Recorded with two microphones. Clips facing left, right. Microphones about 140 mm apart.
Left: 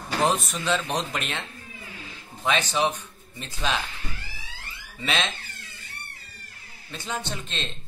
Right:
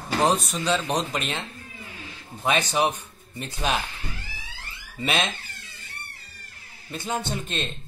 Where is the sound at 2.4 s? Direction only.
50° right (ahead or behind).